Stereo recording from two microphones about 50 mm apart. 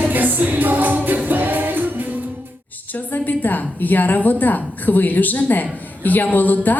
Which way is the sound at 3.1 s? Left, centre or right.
Left.